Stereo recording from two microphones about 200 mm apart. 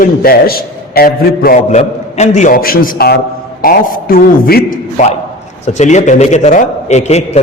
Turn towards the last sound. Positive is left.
turn(degrees=35)  # may be behind; listen again after turning